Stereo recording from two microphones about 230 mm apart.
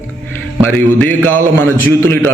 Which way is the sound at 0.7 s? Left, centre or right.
Centre.